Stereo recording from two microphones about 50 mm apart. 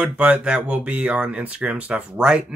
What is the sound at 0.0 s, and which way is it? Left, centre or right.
Speech, right.